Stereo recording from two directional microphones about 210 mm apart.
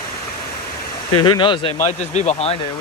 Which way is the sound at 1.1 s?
20° left (ahead or behind).